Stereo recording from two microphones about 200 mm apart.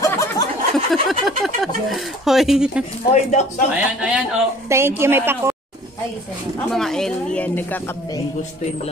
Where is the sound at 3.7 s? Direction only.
5° right (ahead or behind).